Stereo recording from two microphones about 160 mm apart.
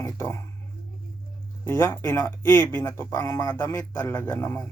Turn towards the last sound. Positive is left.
turn(degrees=15)  # may be behind; listen again after turning